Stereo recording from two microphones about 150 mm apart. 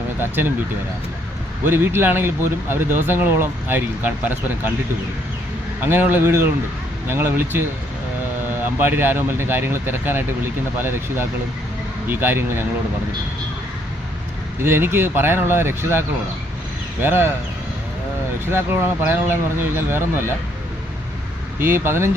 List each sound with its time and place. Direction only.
0.2 s speech: 15° right (ahead or behind)
1.6 s speech: 15° right (ahead or behind)
5.8 s speech: 15° right (ahead or behind)
8.8 s speech: 15° right (ahead or behind)
14.6 s speech: 15° right (ahead or behind)
18.5 s speech: 15° right (ahead or behind)
21.6 s speech: 15° right (ahead or behind)